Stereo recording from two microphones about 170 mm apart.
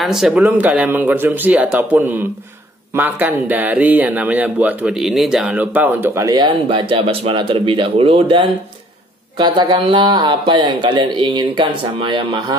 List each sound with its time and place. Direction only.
0.0 s a man's voice: centre (ahead or behind); by 12.5 s 25° right (ahead or behind)